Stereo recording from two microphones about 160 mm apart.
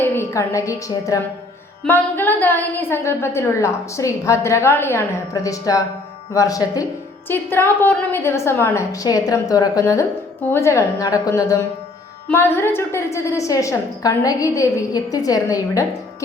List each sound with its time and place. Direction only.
0.0 s a woman's voice: 15° left (ahead or behind)